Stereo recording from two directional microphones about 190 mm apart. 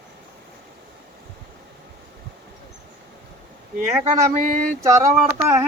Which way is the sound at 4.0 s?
40° right (ahead or behind).